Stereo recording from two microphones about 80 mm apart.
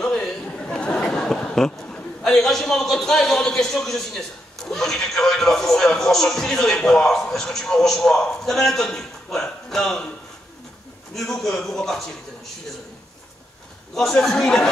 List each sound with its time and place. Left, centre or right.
0.0 s a sound: centre
1.9 s speech: centre
11.1 s a man's voice: centre
13.9 s a man's voice: centre